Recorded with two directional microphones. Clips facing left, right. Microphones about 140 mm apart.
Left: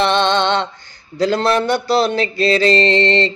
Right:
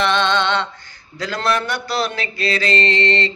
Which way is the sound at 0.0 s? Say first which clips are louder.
Left 3 dB; 30° left (ahead or behind).